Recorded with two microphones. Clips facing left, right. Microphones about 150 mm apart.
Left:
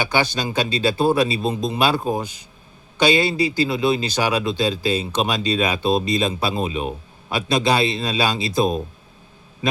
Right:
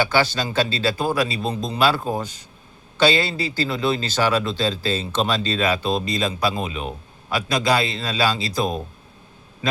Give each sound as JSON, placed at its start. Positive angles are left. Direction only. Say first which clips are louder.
{"t": 0.0, "sound": "a man's voice", "louder": "right 1 dB", "side_deg": 15}